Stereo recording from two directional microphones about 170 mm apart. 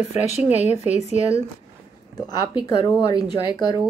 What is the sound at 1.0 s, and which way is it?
Speech, 35° right (ahead or behind).